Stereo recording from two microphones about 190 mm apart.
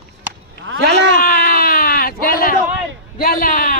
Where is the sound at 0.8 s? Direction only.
65° right (ahead or behind).